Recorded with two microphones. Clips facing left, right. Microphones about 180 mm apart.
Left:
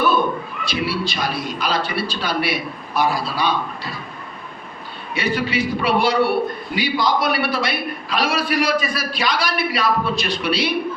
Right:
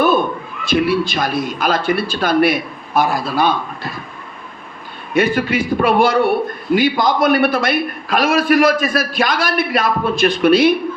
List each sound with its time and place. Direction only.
0.6 s a man's voice: 50° right (ahead or behind)
5.1 s a man's voice: 50° right (ahead or behind)